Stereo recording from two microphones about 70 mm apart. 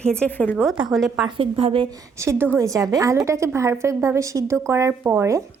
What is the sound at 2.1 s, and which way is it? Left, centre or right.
A woman's voice, right.